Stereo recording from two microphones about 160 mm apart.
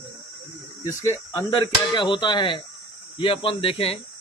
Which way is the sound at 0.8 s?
25° left (ahead or behind).